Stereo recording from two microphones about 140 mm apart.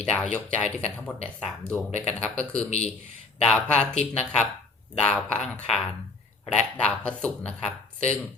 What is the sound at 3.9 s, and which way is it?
Speech, 50° left (ahead or behind).